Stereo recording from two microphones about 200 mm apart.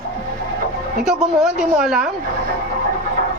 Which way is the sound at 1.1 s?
Centre (ahead or behind).